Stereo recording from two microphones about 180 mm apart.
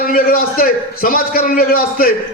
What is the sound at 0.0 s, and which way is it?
A man's voice, 55° left (ahead or behind).